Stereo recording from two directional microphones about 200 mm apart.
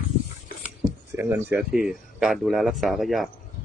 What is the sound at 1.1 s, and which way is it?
Speech, 15° right (ahead or behind).